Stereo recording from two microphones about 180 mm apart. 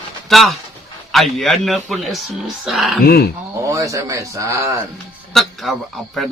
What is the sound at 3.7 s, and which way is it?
Speech, 15° right (ahead or behind).